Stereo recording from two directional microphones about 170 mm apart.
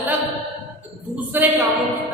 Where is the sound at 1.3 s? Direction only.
10° right (ahead or behind).